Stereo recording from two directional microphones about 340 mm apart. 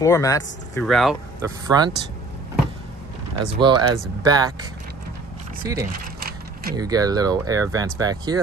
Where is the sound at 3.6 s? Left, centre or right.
Centre.